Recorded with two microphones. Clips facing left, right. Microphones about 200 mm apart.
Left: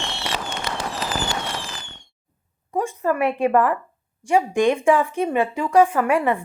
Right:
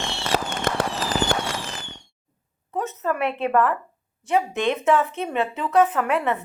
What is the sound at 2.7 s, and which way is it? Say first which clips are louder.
A woman's voice: left 4 dB; 10° left (ahead or behind).